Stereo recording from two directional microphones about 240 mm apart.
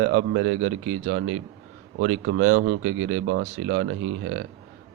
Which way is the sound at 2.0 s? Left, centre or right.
Right.